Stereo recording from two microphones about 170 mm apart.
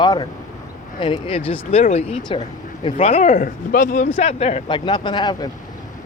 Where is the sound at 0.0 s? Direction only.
25° left (ahead or behind).